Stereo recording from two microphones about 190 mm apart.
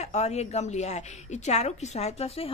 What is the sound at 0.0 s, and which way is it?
A woman's voice, 35° left (ahead or behind).